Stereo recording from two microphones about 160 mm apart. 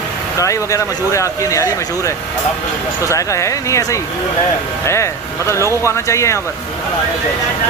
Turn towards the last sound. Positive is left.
turn(degrees=20)  # may be behind; listen again after turning